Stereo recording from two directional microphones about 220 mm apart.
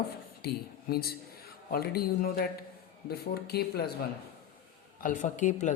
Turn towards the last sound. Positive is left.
turn(degrees=35)  # may be behind; listen again after turning